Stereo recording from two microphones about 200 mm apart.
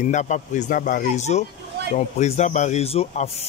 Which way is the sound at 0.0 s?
35° left (ahead or behind).